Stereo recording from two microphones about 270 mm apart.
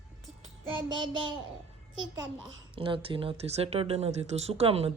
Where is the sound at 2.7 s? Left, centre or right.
Centre.